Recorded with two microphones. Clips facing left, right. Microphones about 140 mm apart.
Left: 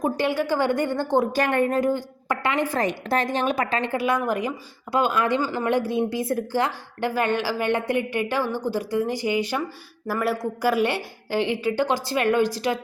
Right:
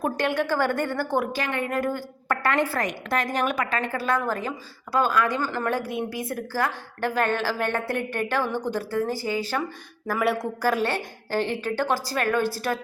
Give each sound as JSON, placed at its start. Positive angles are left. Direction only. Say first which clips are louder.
{"t": 0.0, "sound": "a woman's voice", "louder": "left 2 dB", "side_deg": 10}
{"t": 1.3, "sound": "speech", "louder": "left 7 dB", "side_deg": 45}
{"t": 1.7, "sound": "a woman's voice", "louder": "left 4 dB", "side_deg": 20}
{"t": 2.8, "sound": "a woman's voice", "louder": "left 3 dB", "side_deg": 30}
{"t": 3.9, "sound": "a woman's voice", "louder": "left 3 dB", "side_deg": 15}
{"t": 5.4, "sound": "a woman's voice", "louder": "left 3 dB", "side_deg": 15}
{"t": 10.1, "sound": "speech", "louder": "even", "side_deg": 0}
{"t": 10.6, "sound": "a woman's voice", "louder": "left 4 dB", "side_deg": 10}